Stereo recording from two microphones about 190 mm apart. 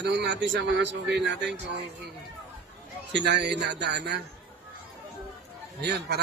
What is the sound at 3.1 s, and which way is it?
A man's voice, 65° right (ahead or behind).